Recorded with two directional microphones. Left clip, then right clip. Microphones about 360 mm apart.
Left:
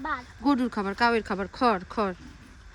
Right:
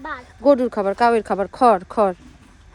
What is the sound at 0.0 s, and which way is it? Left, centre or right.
Speech, left.